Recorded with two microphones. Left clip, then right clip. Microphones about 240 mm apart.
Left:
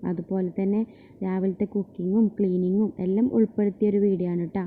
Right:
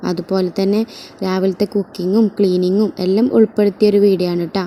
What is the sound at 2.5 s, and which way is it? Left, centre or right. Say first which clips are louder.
Speech: right 10 dB; right.